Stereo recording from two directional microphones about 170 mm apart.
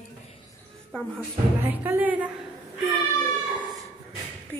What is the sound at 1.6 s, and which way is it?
Speech, 10° right (ahead or behind).